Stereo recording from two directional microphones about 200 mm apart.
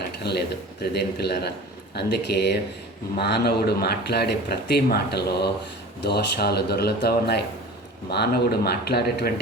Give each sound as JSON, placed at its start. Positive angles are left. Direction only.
{"t": 0.2, "sound": "a man's voice", "side_deg": 55}